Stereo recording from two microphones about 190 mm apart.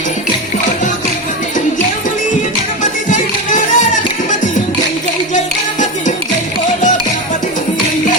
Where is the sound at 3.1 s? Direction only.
40° left (ahead or behind).